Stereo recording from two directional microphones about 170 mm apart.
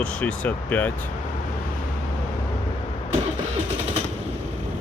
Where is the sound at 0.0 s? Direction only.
5° left (ahead or behind).